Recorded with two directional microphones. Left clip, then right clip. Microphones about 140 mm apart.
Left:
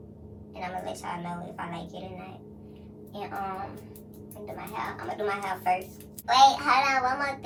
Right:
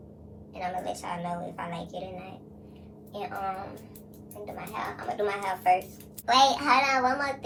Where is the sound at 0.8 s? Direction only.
45° right (ahead or behind).